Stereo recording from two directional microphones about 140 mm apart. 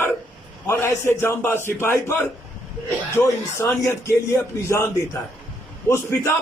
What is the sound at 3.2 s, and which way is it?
A man's voice, 20° left (ahead or behind).